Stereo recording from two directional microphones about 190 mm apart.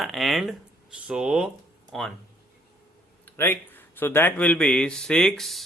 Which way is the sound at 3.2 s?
10° left (ahead or behind).